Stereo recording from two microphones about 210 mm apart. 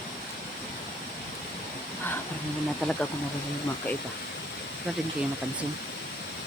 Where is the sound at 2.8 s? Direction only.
5° left (ahead or behind).